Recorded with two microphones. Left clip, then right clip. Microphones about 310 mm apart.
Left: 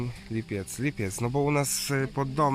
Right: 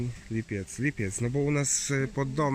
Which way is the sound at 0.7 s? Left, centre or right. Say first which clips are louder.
Right 2 dB; centre.